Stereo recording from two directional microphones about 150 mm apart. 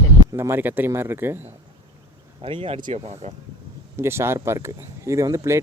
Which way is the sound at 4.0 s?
15° right (ahead or behind).